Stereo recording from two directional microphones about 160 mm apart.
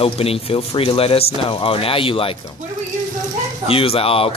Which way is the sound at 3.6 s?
35° left (ahead or behind).